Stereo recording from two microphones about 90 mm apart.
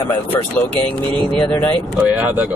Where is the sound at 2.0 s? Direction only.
20° right (ahead or behind).